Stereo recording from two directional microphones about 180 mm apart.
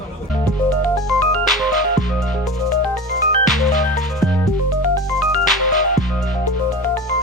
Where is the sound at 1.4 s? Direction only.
Centre (ahead or behind).